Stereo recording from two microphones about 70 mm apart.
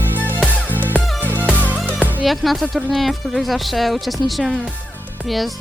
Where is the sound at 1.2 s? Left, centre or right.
Right.